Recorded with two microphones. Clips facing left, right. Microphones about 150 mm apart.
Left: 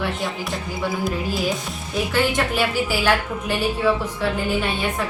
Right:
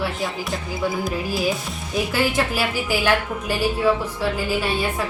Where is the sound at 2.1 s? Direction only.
10° right (ahead or behind).